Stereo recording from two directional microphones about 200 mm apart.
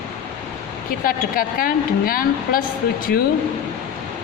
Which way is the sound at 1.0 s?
45° left (ahead or behind).